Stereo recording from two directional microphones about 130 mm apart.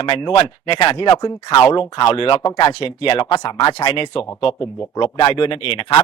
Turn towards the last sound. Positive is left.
turn(degrees=45)  # may be behind; listen again after turning